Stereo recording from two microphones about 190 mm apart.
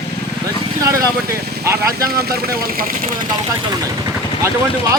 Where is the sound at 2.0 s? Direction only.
55° right (ahead or behind).